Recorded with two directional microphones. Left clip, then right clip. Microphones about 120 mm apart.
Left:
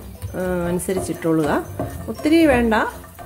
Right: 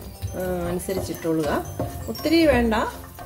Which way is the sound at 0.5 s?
45° left (ahead or behind).